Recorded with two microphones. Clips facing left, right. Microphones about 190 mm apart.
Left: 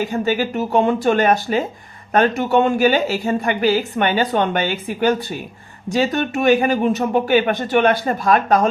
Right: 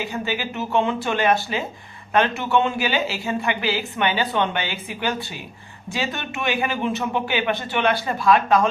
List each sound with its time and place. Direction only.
0.0 s a woman's voice: 45° left (ahead or behind)